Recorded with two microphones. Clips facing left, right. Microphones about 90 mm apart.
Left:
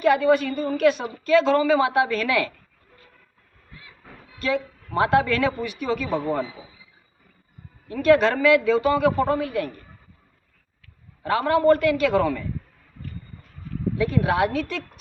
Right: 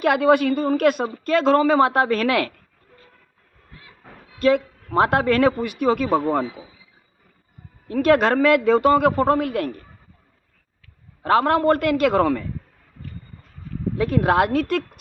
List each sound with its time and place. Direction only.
0.0 s a man's voice: 60° right (ahead or behind)
4.4 s speech: 50° right (ahead or behind)
7.9 s speech: 55° right (ahead or behind)
11.2 s a man's voice: 60° right (ahead or behind)
13.9 s a man's voice: 55° right (ahead or behind)